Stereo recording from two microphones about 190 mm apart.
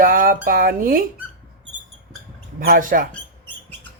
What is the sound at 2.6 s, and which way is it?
Speech, 45° right (ahead or behind).